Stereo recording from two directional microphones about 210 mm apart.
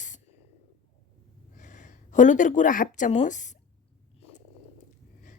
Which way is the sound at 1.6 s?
35° left (ahead or behind).